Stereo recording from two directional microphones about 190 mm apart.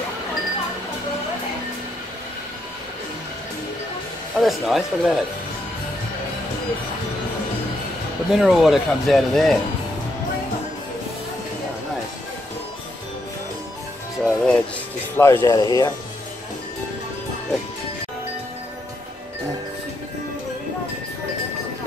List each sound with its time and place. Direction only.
4.4 s speech: centre (ahead or behind)
8.4 s speech: centre (ahead or behind)
14.2 s music: 5° left (ahead or behind)
15.1 s speech: 10° left (ahead or behind)